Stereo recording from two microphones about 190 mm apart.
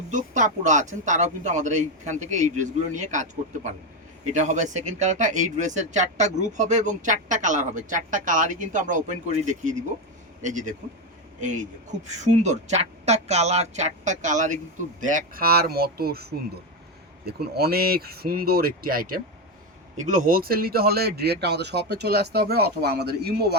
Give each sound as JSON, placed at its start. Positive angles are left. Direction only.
{"t": 0.1, "sound": "speech", "side_deg": -40}